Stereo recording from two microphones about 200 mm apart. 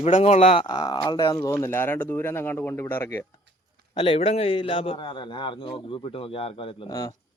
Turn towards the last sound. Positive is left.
turn(degrees=25)  # may be behind; listen again after turning